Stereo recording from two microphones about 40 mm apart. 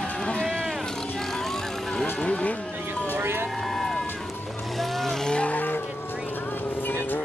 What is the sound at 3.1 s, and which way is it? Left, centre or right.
Vehicle, right.